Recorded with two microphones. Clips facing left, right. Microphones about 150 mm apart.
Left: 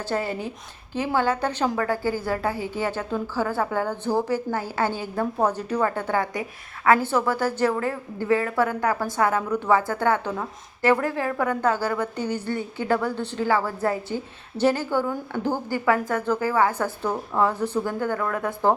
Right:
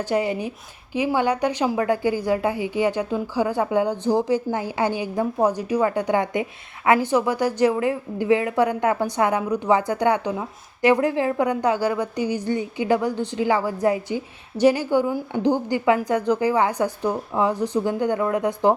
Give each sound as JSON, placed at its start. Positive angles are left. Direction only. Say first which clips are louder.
{"t": 0.1, "sound": "a woman's voice", "louder": "right 3 dB", "side_deg": -15}